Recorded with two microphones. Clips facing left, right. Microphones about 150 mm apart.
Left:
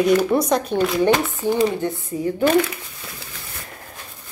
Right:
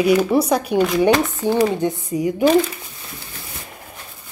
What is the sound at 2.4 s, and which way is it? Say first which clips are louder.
Speech: right 2 dB; 55° left (ahead or behind).